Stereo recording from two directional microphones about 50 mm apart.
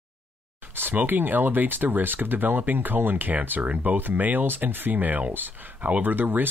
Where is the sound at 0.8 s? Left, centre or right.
Right.